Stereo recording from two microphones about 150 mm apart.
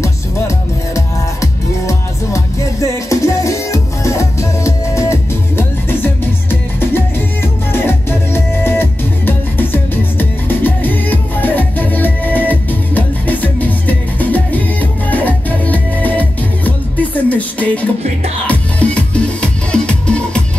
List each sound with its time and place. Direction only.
0.0 s music: 20° left (ahead or behind)